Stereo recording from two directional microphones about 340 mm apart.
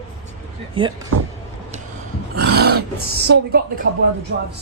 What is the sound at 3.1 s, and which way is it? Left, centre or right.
A woman's voice, right.